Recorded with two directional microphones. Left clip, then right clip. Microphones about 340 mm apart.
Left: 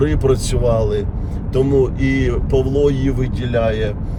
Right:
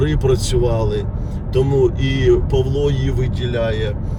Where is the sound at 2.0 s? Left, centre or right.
Centre.